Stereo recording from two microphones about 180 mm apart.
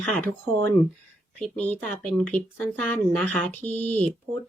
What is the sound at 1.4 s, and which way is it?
Speech, 5° left (ahead or behind).